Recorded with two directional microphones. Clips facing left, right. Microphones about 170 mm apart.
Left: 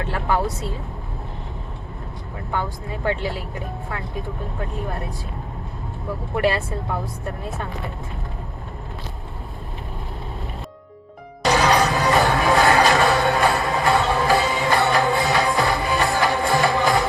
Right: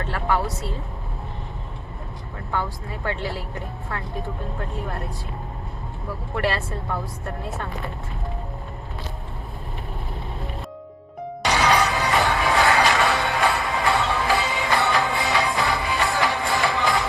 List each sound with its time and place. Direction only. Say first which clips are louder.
0.1 s a woman's voice: left 1 dB; 20° left (ahead or behind)
2.5 s speech: left 1 dB; 15° left (ahead or behind)
6.3 s speech: left 4 dB; 15° left (ahead or behind)
11.5 s music: left 2 dB; 40° left (ahead or behind)